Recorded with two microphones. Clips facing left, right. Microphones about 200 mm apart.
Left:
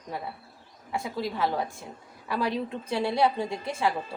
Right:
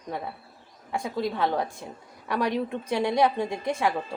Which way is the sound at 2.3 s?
15° right (ahead or behind).